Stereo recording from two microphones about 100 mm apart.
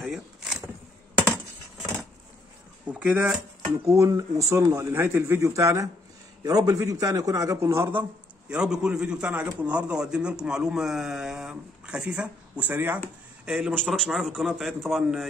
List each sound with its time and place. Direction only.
0.0 s vehicle: 5° right (ahead or behind)
2.9 s speech: 15° right (ahead or behind)
3.9 s a man's voice: 30° right (ahead or behind); by 15.2 s centre (ahead or behind)